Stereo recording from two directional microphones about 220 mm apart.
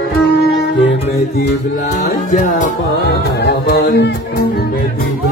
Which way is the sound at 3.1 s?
50° left (ahead or behind).